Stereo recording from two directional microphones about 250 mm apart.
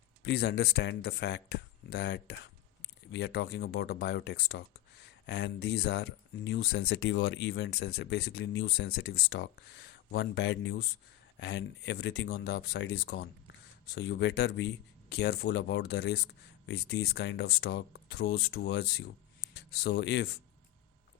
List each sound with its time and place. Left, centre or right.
0.3 s speech: left